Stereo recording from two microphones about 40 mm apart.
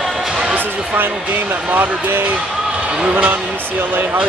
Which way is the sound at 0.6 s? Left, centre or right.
Right.